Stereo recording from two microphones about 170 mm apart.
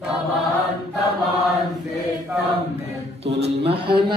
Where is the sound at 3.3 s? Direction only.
35° right (ahead or behind).